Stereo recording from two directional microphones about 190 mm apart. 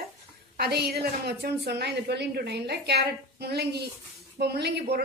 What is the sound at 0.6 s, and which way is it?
A woman's voice, 60° right (ahead or behind).